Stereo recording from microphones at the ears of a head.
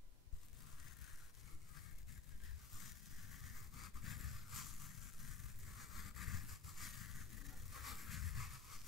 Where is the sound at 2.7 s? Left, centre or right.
Left.